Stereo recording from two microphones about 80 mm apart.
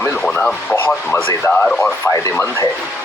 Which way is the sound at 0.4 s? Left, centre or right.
Centre.